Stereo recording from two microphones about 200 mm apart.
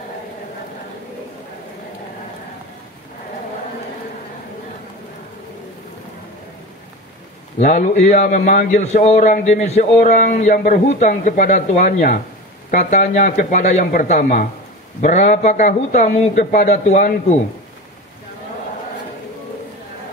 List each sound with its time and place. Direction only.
7.5 s a man's voice: 40° left (ahead or behind)